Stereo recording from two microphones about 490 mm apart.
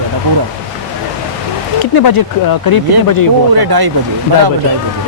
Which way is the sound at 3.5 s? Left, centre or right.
Right.